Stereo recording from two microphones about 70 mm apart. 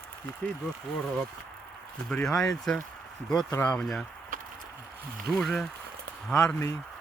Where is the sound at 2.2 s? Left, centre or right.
Centre.